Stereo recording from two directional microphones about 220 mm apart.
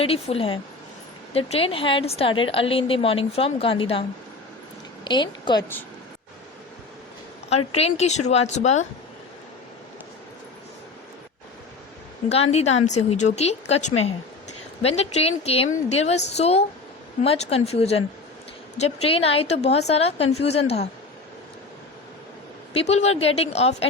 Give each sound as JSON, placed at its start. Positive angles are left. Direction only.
{"t": 0.0, "sound": "speech", "side_deg": 25}
{"t": 5.0, "sound": "speech", "side_deg": 20}
{"t": 7.8, "sound": "speech", "side_deg": 30}
{"t": 12.3, "sound": "speech", "side_deg": 30}
{"t": 22.8, "sound": "speech", "side_deg": 30}